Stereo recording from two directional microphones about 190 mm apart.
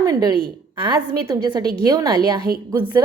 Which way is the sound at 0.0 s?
20° right (ahead or behind).